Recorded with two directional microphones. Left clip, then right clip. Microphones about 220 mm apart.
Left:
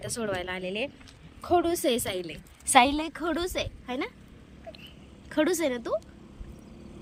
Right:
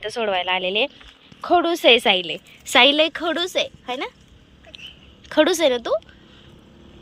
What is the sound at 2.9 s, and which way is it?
A woman's voice, 20° right (ahead or behind).